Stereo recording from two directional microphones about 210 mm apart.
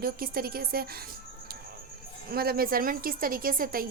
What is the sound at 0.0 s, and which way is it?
A woman's voice, 45° right (ahead or behind).